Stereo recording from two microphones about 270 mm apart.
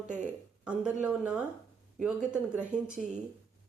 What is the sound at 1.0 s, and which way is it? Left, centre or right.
Speech, centre.